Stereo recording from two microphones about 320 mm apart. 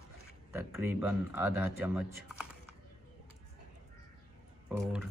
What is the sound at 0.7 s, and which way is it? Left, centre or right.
Speech, centre.